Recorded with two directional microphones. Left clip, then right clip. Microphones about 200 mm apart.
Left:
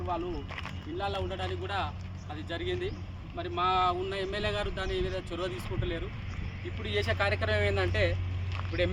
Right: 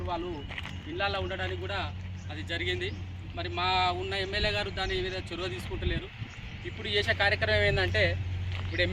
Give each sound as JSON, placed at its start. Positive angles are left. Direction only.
{"t": 0.5, "sound": "speech", "side_deg": 10}